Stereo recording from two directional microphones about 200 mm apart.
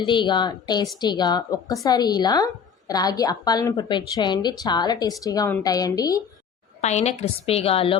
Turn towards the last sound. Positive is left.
turn(degrees=30)  # may be behind; listen again after turning